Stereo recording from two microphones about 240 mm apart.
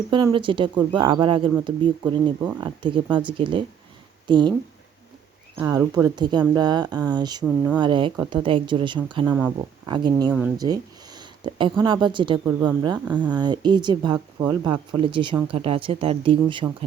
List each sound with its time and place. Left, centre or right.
0.1 s speech: right
5.5 s speech: centre
7.4 s speech: centre
7.8 s speech: centre
9.2 s speech: centre